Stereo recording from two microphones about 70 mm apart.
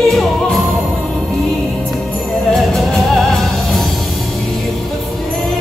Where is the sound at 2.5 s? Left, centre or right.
Centre.